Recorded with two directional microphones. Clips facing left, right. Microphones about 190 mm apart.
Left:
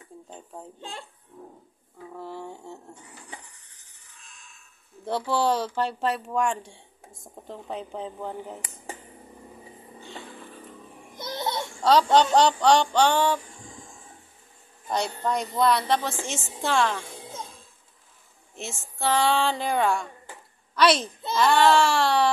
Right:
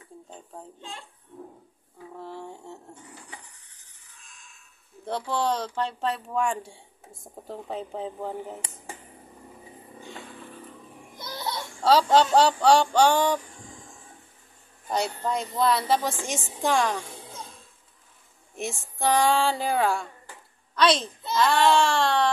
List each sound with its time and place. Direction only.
2.1 s a sound: centre (ahead or behind)
5.0 s speech: 5° left (ahead or behind)
11.1 s babbling: 20° left (ahead or behind)
12.1 s a woman's voice: 5° right (ahead or behind)
14.9 s a woman's voice: 5° right (ahead or behind)
18.6 s a woman's voice: 15° right (ahead or behind); by 22.3 s 5° left (ahead or behind)